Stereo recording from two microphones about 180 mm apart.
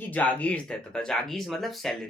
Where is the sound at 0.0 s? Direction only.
10° left (ahead or behind).